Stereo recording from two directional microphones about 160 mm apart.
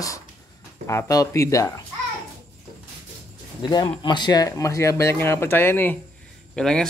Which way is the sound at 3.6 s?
25° left (ahead or behind).